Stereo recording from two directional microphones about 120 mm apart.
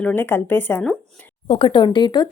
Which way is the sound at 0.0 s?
15° left (ahead or behind).